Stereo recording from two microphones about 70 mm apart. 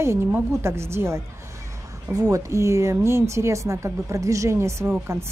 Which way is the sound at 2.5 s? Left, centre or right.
Right.